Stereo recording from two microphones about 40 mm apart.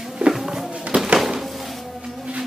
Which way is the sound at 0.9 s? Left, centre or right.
Right.